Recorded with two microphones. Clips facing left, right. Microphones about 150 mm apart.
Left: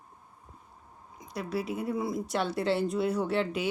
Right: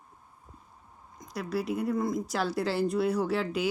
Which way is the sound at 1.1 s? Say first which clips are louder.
Right 1 dB; 5° left (ahead or behind).